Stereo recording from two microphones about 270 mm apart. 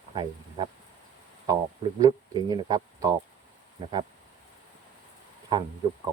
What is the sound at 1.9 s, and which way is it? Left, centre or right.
Speech, centre.